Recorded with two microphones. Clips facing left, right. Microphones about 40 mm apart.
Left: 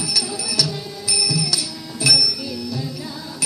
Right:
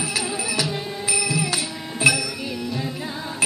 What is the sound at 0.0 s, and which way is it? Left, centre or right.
Music, right.